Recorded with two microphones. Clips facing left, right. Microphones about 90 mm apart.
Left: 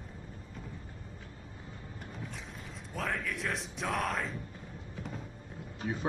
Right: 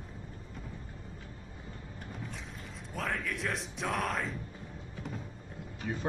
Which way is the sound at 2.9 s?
Centre (ahead or behind).